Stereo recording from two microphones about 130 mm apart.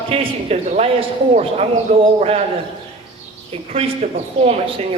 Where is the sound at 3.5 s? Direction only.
50° right (ahead or behind).